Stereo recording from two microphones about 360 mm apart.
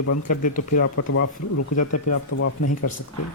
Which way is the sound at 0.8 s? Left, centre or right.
Left.